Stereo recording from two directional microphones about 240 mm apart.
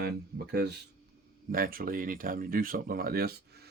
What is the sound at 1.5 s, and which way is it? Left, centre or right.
Speech, right.